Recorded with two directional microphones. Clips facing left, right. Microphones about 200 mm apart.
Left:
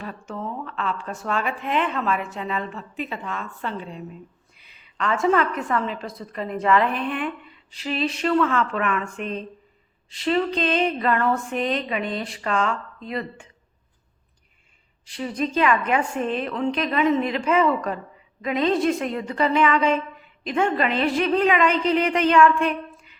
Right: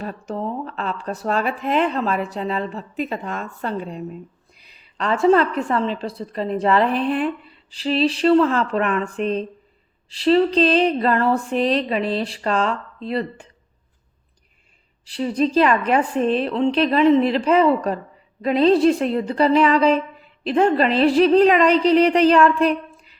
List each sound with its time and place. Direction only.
0.0 s speech: 40° right (ahead or behind)
4.5 s a sound: 35° right (ahead or behind)
5.5 s speech: 30° right (ahead or behind)
15.0 s speech: 35° right (ahead or behind)